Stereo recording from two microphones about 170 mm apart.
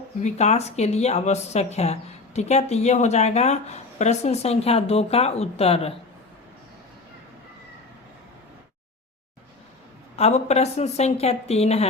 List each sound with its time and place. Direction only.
0.2 s speech: 45° left (ahead or behind)
10.2 s speech: 40° left (ahead or behind)